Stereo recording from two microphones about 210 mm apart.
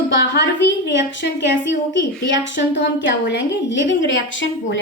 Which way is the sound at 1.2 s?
60° left (ahead or behind).